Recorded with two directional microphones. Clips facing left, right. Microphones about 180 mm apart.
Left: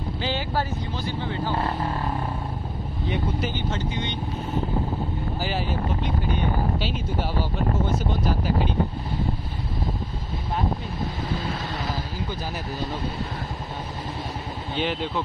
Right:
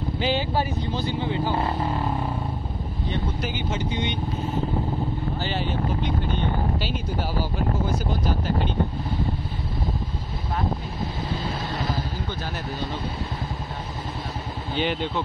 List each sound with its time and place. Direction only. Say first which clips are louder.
0.2 s vehicle: right 3 dB; 15° right (ahead or behind)
3.9 s speech: right 2 dB; 15° right (ahead or behind)
5.4 s speech: left 1 dB; 5° left (ahead or behind)
14.8 s speech: right 1 dB; centre (ahead or behind)